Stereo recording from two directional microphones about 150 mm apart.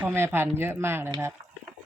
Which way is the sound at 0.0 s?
15° right (ahead or behind).